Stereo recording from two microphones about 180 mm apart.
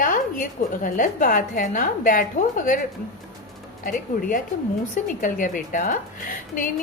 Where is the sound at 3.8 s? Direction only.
50° left (ahead or behind).